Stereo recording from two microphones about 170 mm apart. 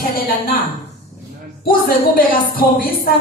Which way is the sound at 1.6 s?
60° left (ahead or behind).